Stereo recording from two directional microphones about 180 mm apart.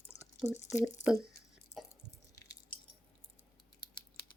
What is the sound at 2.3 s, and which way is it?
Squish, 20° left (ahead or behind).